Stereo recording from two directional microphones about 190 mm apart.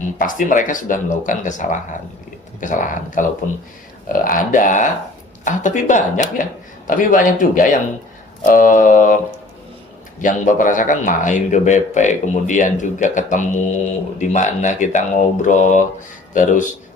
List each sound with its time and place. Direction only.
0.0 s speech: 45° left (ahead or behind)